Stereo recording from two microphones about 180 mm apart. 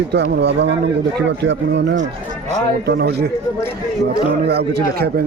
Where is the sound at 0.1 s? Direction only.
70° right (ahead or behind).